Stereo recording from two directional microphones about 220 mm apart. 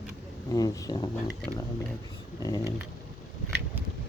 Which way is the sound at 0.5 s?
15° left (ahead or behind).